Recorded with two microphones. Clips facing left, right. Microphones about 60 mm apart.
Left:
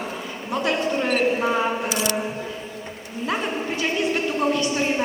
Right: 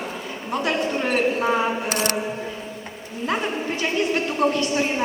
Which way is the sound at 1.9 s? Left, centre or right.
Right.